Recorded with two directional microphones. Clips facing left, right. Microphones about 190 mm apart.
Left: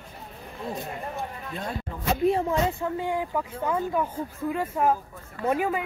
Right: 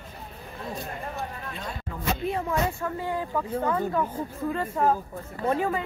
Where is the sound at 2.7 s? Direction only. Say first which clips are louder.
Left 2 dB; 20° left (ahead or behind).